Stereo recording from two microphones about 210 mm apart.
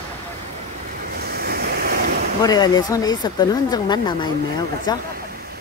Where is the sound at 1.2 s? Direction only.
45° right (ahead or behind).